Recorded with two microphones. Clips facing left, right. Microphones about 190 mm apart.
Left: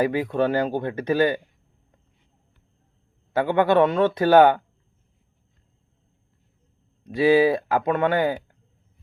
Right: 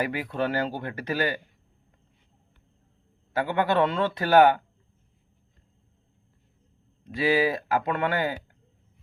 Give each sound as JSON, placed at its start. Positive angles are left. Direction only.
{"t": 0.0, "sound": "speech", "side_deg": 20}
{"t": 3.3, "sound": "speech", "side_deg": 20}
{"t": 7.0, "sound": "speech", "side_deg": 20}